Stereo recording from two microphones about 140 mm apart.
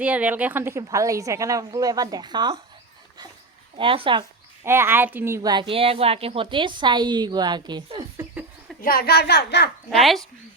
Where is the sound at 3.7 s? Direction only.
40° right (ahead or behind).